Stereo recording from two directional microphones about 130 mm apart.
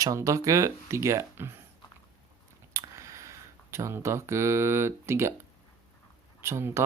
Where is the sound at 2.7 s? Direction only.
25° right (ahead or behind).